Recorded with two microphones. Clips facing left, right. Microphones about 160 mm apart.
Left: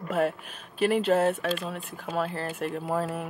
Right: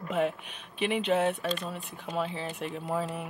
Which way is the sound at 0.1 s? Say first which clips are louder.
Left 2 dB; centre (ahead or behind).